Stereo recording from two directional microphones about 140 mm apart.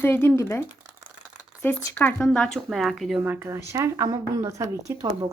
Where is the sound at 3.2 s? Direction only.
15° right (ahead or behind).